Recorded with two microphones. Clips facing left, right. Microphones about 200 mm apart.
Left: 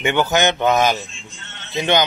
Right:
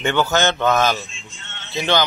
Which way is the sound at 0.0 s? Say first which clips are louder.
Left 1 dB; 15° left (ahead or behind).